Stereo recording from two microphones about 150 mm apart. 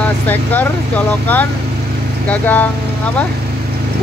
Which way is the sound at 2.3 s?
10° left (ahead or behind).